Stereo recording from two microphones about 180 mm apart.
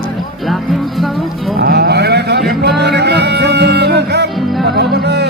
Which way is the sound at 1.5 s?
60° right (ahead or behind).